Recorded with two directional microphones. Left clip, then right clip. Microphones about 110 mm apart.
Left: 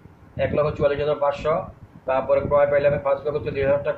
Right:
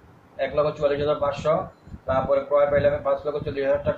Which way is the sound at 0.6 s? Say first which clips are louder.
Left 1 dB; 80° left.